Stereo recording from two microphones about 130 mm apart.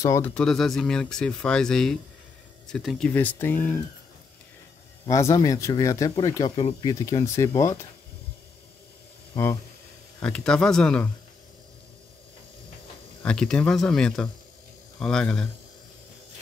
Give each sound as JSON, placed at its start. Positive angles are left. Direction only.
{"t": 0.2, "sound": "speech", "side_deg": 5}
{"t": 3.1, "sound": "speech", "side_deg": 15}
{"t": 5.0, "sound": "speech", "side_deg": 25}
{"t": 10.2, "sound": "speech", "side_deg": 5}
{"t": 13.2, "sound": "speech", "side_deg": 5}